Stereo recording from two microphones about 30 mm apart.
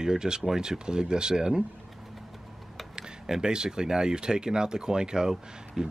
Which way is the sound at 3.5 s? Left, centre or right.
Right.